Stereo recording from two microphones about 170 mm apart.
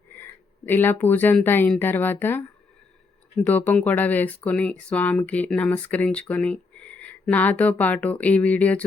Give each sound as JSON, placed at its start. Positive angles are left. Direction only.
{"t": 0.2, "sound": "speech", "side_deg": 10}
{"t": 3.4, "sound": "speech", "side_deg": 10}